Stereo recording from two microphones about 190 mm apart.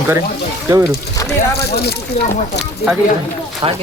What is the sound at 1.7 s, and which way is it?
Speech, 55° left (ahead or behind).